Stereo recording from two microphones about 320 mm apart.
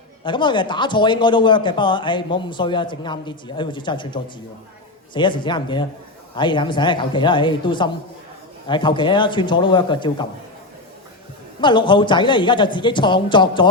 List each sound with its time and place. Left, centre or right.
0.3 s speech: centre
11.6 s speech: centre